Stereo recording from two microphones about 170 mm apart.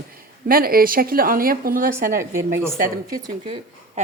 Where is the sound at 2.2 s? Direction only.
15° right (ahead or behind).